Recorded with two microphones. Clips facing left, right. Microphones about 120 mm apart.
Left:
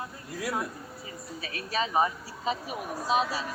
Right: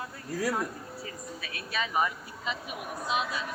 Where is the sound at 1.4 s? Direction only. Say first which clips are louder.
Left 4 dB; 40° left (ahead or behind).